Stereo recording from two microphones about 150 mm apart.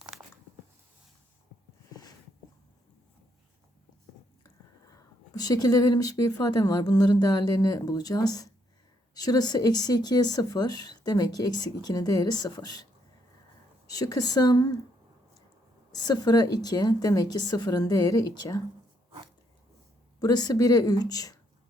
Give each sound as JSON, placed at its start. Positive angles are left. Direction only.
{"t": 5.3, "sound": "speech", "side_deg": 25}
{"t": 15.9, "sound": "speech", "side_deg": 25}
{"t": 20.1, "sound": "speech", "side_deg": 25}